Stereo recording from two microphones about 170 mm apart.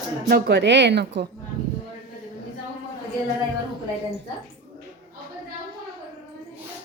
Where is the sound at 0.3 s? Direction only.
85° right.